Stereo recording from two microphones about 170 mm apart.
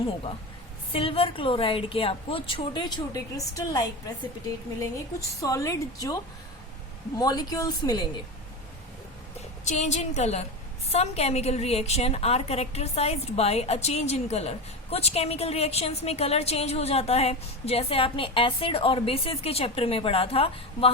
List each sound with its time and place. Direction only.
0.9 s a woman's voice: 35° left (ahead or behind)
5.4 s a woman's voice: 20° left (ahead or behind)
7.2 s a woman's voice: 20° left (ahead or behind)
9.6 s a woman's voice: 40° left (ahead or behind)